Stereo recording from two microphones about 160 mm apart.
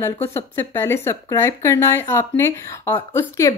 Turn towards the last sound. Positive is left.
turn(degrees=20)  # may be behind; listen again after turning